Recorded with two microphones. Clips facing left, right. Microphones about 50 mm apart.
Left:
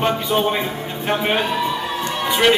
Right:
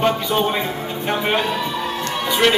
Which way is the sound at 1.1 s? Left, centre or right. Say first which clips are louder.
Left 1 dB; centre.